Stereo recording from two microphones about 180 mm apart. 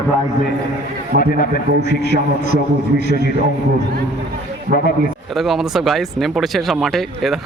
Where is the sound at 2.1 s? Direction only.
60° right (ahead or behind).